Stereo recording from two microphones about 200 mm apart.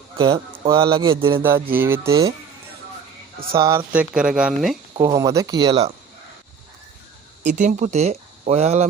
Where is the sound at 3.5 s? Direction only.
15° right (ahead or behind).